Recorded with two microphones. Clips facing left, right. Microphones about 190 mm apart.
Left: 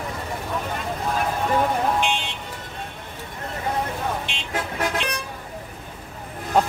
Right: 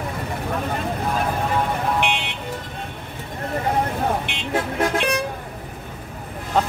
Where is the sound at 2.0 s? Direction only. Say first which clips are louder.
Right 1 dB; 65° right (ahead or behind).